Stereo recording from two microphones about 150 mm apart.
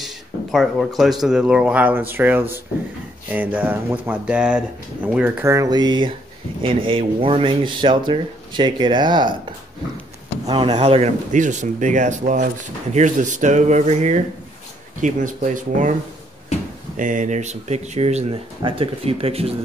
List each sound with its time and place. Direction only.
0.0 s a sound: centre (ahead or behind)
1.2 s speech: 5° right (ahead or behind); by 9.3 s 30° right (ahead or behind)
10.4 s speech: 35° right (ahead or behind)